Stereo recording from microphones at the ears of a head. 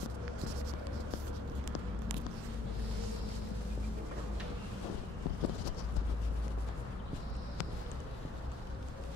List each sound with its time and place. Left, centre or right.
4.8 s boat: left